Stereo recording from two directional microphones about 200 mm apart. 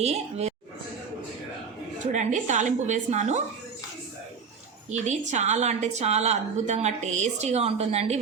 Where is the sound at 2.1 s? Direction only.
35° right (ahead or behind).